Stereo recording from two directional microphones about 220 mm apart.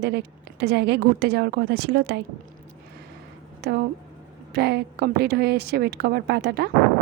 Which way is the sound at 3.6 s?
45° right (ahead or behind).